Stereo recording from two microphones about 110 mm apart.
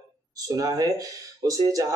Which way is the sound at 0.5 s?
35° right (ahead or behind).